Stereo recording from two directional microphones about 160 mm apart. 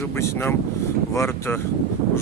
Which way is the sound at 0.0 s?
15° left (ahead or behind).